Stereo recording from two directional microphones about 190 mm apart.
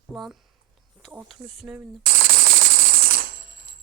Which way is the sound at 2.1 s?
50° right (ahead or behind).